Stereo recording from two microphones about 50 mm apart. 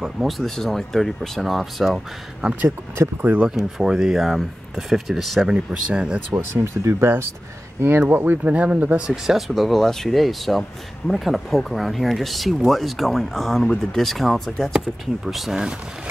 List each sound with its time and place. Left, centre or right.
0.3 s speech: centre
3.0 s speech: right
3.4 s speech: centre
5.5 s speech: right
6.3 s speech: right
8.1 s speech: right
8.5 s speech: right
9.0 s speech: centre
9.5 s speech: centre